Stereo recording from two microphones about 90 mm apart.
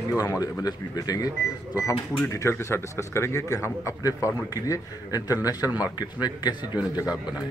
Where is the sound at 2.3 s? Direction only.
35° left (ahead or behind); by 6.6 s 50° left (ahead or behind).